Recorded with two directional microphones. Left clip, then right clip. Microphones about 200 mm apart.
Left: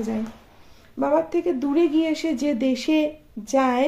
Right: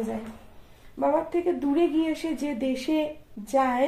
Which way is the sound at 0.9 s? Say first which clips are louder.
Left 3 dB; 35° left (ahead or behind).